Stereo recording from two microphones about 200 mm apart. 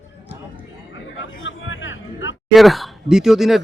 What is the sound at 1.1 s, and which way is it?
Hubbub, 70° left (ahead or behind).